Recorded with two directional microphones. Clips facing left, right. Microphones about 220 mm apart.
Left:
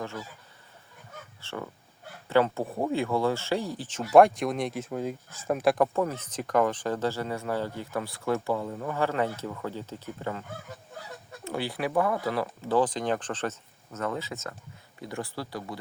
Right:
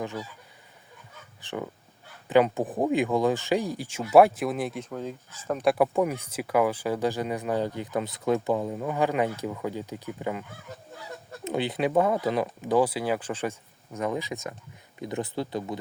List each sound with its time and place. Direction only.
0.0 s speech: 15° right (ahead or behind)
1.4 s speech: 15° right (ahead or behind); by 4.9 s centre (ahead or behind)
4.9 s speech: 10° left (ahead or behind)
5.7 s speech: 10° right (ahead or behind)
11.4 s speech: 20° right (ahead or behind)